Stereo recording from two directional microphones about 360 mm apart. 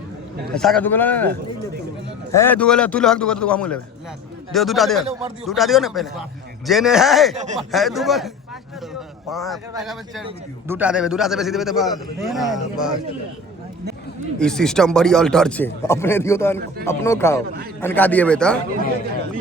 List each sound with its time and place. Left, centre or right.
0.5 s a man's voice: centre
2.3 s a man's voice: centre
7.3 s speech: centre
7.7 s a man's voice: centre
9.3 s a man's voice: centre
14.3 s a man's voice: centre